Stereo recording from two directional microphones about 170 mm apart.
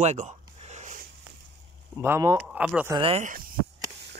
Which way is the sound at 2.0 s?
15° right (ahead or behind).